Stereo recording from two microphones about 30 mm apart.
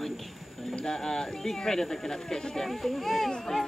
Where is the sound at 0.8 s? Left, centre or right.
Left.